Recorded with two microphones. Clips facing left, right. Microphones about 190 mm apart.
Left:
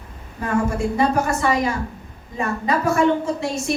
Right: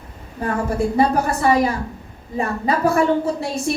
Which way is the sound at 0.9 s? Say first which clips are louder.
Right 1 dB; 35° right (ahead or behind).